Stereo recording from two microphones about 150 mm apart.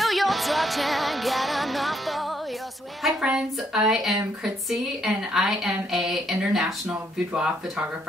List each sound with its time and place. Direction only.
0.0 s music: centre (ahead or behind)
3.0 s speech: centre (ahead or behind)